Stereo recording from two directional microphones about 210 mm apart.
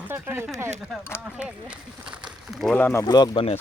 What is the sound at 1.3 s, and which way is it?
Speech, 5° right (ahead or behind).